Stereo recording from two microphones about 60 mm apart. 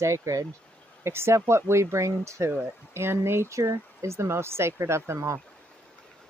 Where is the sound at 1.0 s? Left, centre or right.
Right.